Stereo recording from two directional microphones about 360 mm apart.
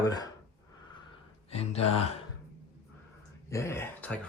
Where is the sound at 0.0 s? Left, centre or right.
Centre.